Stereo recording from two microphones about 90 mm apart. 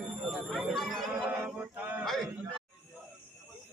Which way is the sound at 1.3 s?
20° right (ahead or behind).